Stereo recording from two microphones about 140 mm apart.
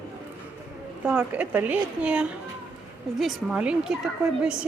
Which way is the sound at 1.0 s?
10° right (ahead or behind).